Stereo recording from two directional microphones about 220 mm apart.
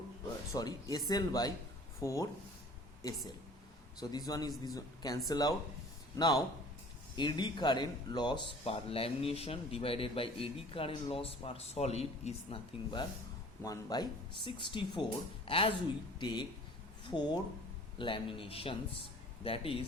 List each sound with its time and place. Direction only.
0.5 s speech: 15° left (ahead or behind)